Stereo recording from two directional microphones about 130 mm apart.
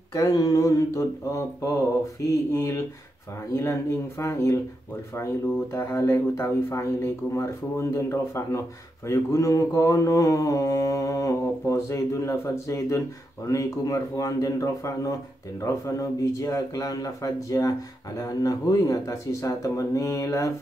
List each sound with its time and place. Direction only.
0.1 s speech: 30° left (ahead or behind)